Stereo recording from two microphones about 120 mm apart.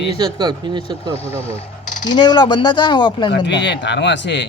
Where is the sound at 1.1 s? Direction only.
55° left (ahead or behind).